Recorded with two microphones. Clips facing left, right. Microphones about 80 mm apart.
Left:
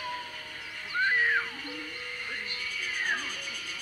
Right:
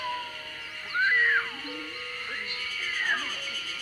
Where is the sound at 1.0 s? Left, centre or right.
Right.